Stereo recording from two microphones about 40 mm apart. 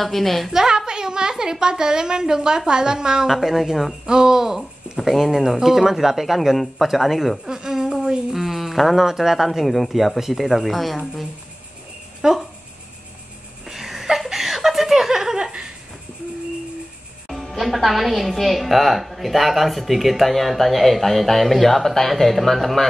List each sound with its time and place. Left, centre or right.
0.0 s a woman's voice: centre
0.5 s a woman's voice: centre
3.3 s a woman's voice: centre
7.4 s a woman's voice: centre
12.2 s speech: centre
13.7 s chuckle: centre
15.3 s a sound: centre
17.5 s a woman's voice: centre